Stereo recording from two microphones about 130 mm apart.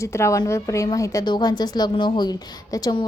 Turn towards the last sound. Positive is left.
turn(degrees=30)  # may be behind; listen again after turning